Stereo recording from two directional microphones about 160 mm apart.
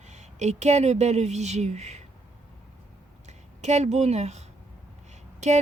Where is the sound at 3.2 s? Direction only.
45° right (ahead or behind).